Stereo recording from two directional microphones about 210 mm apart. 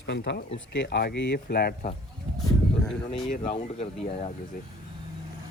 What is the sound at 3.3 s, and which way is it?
Speech, 35° left (ahead or behind).